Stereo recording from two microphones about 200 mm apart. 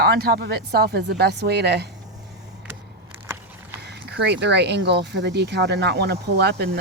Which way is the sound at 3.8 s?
55° right (ahead or behind).